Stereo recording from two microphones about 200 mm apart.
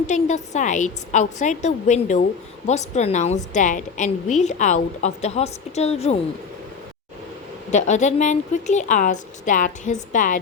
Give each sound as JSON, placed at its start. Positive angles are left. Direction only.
{"t": 0.1, "sound": "a woman's voice", "side_deg": 35}
{"t": 7.7, "sound": "a woman's voice", "side_deg": 35}